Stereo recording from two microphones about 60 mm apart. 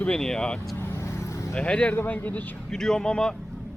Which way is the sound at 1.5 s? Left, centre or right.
Centre.